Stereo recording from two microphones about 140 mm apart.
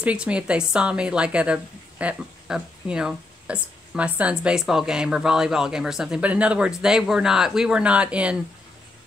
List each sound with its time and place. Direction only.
0.0 s a woman's voice: 10° right (ahead or behind)